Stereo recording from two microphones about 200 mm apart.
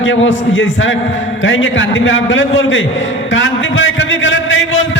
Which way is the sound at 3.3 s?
70° left (ahead or behind).